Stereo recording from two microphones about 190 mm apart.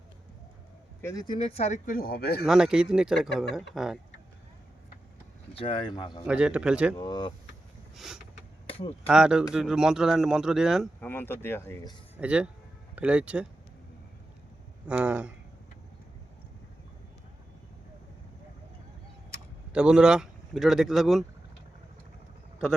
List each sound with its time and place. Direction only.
1.0 s speech: 20° left (ahead or behind); by 2.4 s 55° left (ahead or behind)
2.4 s speech: 5° right (ahead or behind)
5.5 s speech: 25° left (ahead or behind)
6.2 s speech: 5° right (ahead or behind)
6.9 s speech: 20° left (ahead or behind)
7.9 s speech: centre (ahead or behind)
8.6 s a sound: 30° left (ahead or behind)
9.0 s speech: 5° right (ahead or behind)
11.0 s speech: 10° left (ahead or behind)
12.1 s speech: 5° right (ahead or behind)
14.8 s speech: 5° right (ahead or behind)
19.7 s speech: 5° right (ahead or behind)